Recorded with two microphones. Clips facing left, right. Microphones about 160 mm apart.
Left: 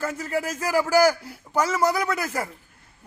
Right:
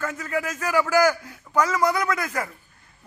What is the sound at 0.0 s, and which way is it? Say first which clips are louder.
A man's voice: left 1 dB; 35° left (ahead or behind).